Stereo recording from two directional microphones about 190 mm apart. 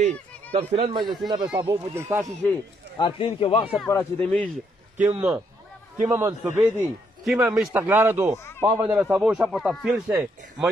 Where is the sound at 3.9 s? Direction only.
10° left (ahead or behind).